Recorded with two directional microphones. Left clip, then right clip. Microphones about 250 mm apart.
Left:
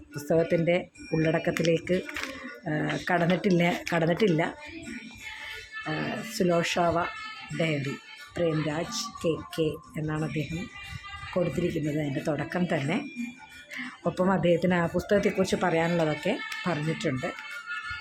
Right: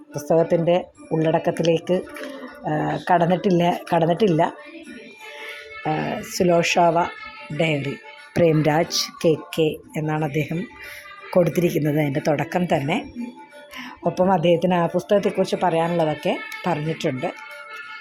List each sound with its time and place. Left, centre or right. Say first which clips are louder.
0.3 s speech: right 6 dB; centre
5.9 s speech: right 8 dB; centre
8.4 s speech: right 11 dB; right; by 17.3 s centre